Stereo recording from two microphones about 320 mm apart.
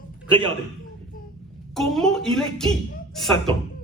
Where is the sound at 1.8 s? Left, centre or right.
Centre.